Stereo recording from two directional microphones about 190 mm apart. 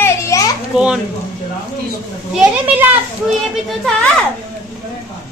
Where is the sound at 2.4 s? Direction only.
10° right (ahead or behind).